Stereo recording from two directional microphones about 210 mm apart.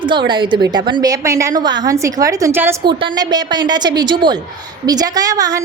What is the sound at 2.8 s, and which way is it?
A woman's voice, 20° right (ahead or behind).